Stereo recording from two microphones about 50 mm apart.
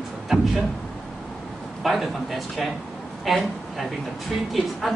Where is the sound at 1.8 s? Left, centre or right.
Centre.